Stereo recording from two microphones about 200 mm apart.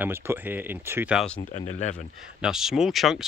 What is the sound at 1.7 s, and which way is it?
Speech, 35° left (ahead or behind).